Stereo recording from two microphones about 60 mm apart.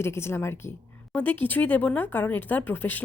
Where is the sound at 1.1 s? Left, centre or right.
Left.